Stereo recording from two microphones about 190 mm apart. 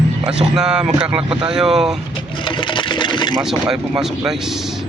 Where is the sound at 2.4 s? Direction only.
25° left (ahead or behind).